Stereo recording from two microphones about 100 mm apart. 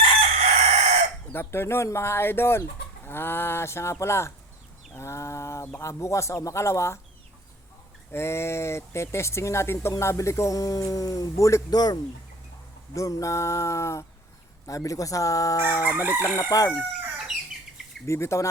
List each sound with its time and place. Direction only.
0.0 s chicken: 90° right
1.3 s speech: 25° left (ahead or behind)
8.1 s speech: 25° left (ahead or behind)
12.9 s speech: 35° left (ahead or behind)
15.8 s chicken: 15° right (ahead or behind)
16.4 s speech: 35° left (ahead or behind)
18.0 s speech: 30° left (ahead or behind)